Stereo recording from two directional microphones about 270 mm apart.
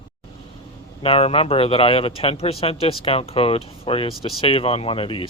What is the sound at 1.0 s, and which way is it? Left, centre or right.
Speech, left.